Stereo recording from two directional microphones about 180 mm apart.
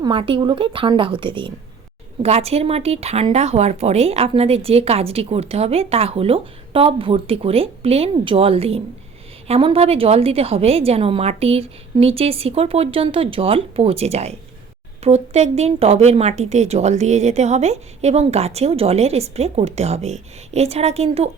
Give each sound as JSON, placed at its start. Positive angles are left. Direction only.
{"t": 0.0, "sound": "a woman's voice", "side_deg": -30}